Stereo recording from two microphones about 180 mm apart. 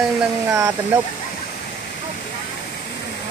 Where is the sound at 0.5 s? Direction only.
15° right (ahead or behind).